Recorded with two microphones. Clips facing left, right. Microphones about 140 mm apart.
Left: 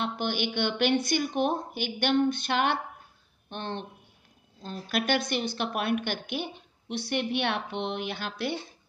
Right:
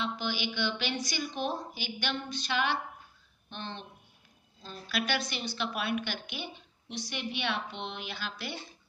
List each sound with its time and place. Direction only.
0.0 s a woman's voice: 55° left (ahead or behind)